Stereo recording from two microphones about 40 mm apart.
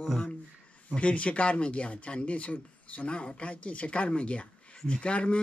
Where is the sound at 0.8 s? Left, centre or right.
Left.